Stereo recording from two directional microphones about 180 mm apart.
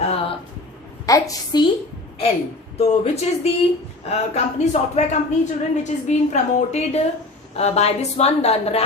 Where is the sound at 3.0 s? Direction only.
35° left (ahead or behind).